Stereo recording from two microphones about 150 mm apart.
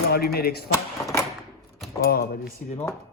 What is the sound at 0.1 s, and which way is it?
Speech, 90° left.